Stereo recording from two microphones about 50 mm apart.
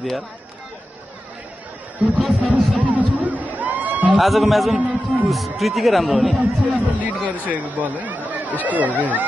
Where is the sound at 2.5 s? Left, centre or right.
Right.